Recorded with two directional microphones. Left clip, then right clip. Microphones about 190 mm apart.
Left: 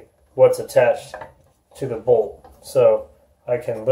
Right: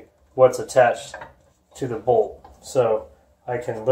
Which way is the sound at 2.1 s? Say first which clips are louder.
Even; 15° right (ahead or behind).